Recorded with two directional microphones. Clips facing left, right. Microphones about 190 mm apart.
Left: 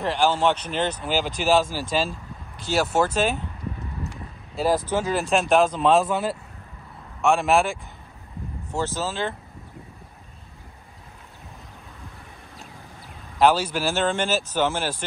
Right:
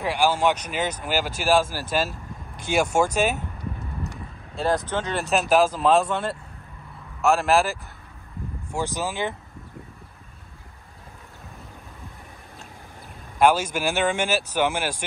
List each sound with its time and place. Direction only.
0.0 s speech: 10° right (ahead or behind)
2.7 s speech: 10° right (ahead or behind)
4.6 s speech: 5° left (ahead or behind)
8.7 s speech: 15° right (ahead or behind)
13.4 s speech: 10° right (ahead or behind)